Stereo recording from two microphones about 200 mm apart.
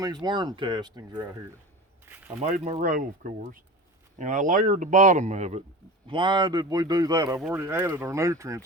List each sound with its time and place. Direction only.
0.0 s a man's voice: 20° right (ahead or behind)
2.0 s a sound: 10° right (ahead or behind)
2.4 s speech: 35° right (ahead or behind)
6.1 s a man's voice: 25° right (ahead or behind)